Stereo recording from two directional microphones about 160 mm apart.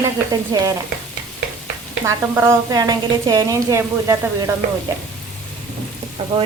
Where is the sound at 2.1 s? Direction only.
15° right (ahead or behind).